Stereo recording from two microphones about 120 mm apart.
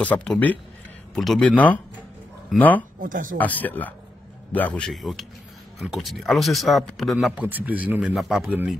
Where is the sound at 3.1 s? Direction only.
90° right.